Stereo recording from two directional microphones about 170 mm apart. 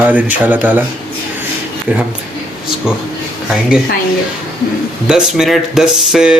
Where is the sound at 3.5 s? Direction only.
Centre (ahead or behind).